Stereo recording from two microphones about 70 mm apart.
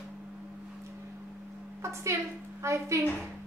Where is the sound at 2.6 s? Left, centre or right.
Right.